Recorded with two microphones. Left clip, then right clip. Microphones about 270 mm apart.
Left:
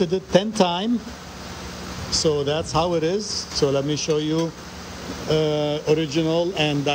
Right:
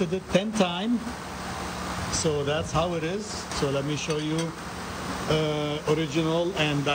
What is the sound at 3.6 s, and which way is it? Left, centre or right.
Speech, centre.